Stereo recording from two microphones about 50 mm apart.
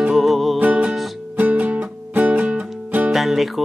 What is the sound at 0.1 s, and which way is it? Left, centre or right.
Music, centre.